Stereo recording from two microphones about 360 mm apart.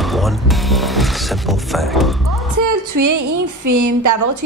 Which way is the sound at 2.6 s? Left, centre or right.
Right.